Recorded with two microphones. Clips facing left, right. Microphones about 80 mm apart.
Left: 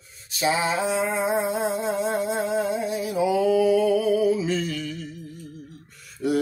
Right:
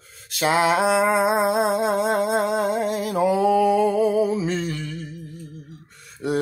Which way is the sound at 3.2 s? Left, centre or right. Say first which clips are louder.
Right 2 dB; right.